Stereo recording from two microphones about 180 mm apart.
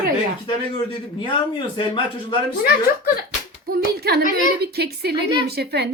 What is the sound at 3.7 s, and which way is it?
A woman's voice, 60° right (ahead or behind).